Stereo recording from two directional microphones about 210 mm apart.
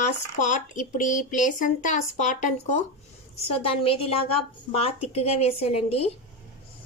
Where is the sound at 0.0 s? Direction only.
35° left (ahead or behind).